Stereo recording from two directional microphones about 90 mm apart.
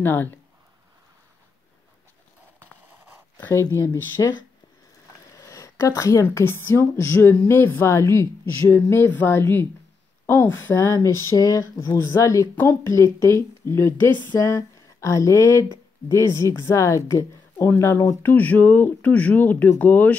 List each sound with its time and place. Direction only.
0.0 s speech: 20° left (ahead or behind)
3.3 s speech: 25° left (ahead or behind)
5.3 s a sound: 35° left (ahead or behind)
6.2 s speech: 25° left (ahead or behind)
14.4 s speech: 35° left (ahead or behind)